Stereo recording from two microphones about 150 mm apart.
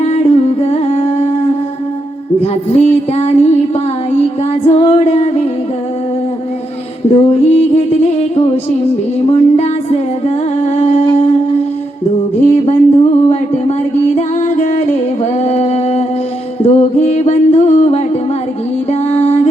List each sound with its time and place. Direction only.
0.0 s singing: 45° left (ahead or behind)
2.4 s music: 45° left (ahead or behind)
4.6 s music: 45° left (ahead or behind)
7.3 s music: 45° left (ahead or behind)
12.5 s a sound: 45° left (ahead or behind)
14.2 s singing: 50° left (ahead or behind)
16.6 s music: 45° left (ahead or behind)